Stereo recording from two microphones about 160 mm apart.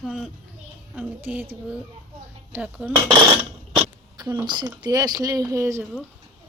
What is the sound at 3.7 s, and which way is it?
Speech, 25° right (ahead or behind).